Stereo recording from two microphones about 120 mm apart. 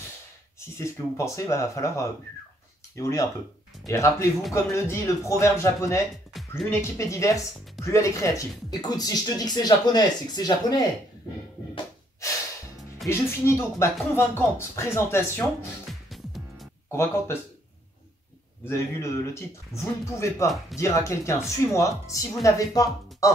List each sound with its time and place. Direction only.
0.6 s speech: 25° left (ahead or behind)
13.0 s speech: 20° left (ahead or behind)
15.9 s music: centre (ahead or behind)
16.9 s speech: 20° left (ahead or behind)
18.7 s speech: 25° left (ahead or behind)